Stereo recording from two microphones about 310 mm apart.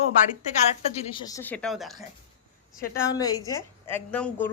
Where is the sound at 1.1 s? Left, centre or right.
Centre.